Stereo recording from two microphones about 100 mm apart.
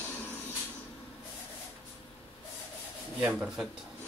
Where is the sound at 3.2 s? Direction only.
10° right (ahead or behind).